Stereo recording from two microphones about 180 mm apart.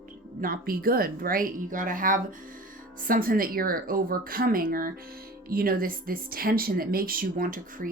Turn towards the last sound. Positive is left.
turn(degrees=-50)  # may be behind; listen again after turning